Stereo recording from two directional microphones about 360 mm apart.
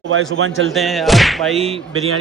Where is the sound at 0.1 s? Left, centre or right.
Right.